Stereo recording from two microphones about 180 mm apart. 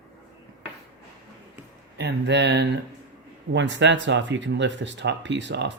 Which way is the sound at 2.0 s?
70° right (ahead or behind).